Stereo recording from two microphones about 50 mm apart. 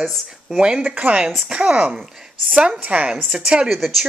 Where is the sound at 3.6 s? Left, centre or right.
Centre.